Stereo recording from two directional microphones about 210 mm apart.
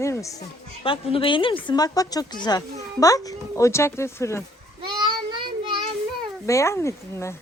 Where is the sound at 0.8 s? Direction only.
25° left (ahead or behind).